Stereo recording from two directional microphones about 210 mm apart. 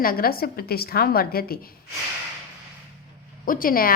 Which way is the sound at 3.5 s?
40° left (ahead or behind).